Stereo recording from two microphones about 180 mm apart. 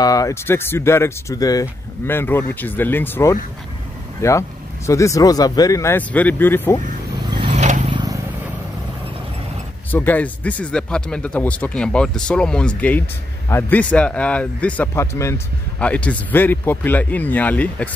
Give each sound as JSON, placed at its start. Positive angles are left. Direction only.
{"t": 0.0, "sound": "speech", "side_deg": 20}
{"t": 7.5, "sound": "vehicle", "side_deg": -40}
{"t": 7.9, "sound": "vehicle", "side_deg": -20}
{"t": 9.8, "sound": "speech", "side_deg": 10}